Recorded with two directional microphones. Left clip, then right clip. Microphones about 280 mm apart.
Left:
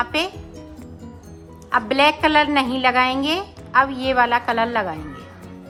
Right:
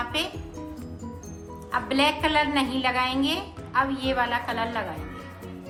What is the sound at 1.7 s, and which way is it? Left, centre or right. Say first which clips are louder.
Speech: left 7 dB; centre.